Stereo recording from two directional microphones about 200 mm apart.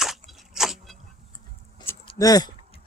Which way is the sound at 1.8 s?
20° left (ahead or behind).